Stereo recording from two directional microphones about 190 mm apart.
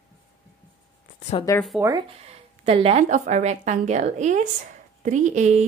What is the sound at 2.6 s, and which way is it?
A woman's voice, 30° right (ahead or behind).